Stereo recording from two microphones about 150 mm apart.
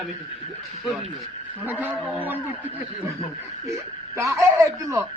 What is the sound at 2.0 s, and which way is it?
Speech, 10° right (ahead or behind).